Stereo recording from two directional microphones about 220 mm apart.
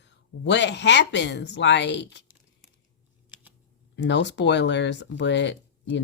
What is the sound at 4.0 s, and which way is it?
Speech, 55° left (ahead or behind).